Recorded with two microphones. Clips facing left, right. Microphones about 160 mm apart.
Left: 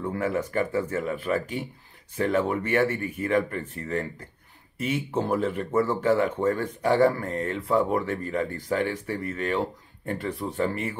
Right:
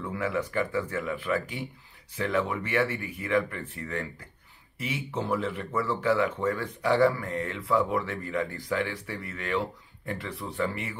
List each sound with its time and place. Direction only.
0.0 s speech: 45° left (ahead or behind)